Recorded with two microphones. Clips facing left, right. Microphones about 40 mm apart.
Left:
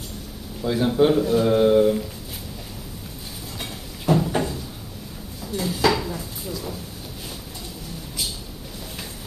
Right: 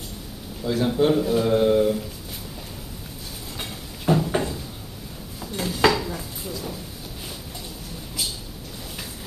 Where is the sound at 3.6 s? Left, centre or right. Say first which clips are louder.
Even; centre.